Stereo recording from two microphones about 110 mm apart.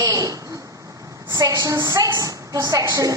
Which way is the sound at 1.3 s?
35° right (ahead or behind).